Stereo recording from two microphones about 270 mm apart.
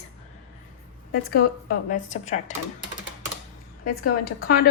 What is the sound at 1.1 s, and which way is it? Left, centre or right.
A woman's voice, left.